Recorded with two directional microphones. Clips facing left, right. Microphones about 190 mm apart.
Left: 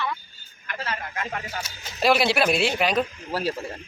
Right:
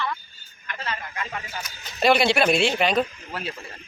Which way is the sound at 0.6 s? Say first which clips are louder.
Left 1 dB; 45° left (ahead or behind).